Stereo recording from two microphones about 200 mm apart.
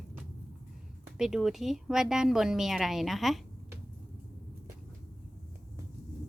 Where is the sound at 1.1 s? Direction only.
Centre (ahead or behind).